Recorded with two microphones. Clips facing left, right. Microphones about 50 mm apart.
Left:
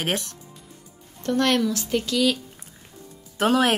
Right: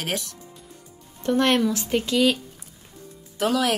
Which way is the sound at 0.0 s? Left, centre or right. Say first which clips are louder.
Left 2 dB; left.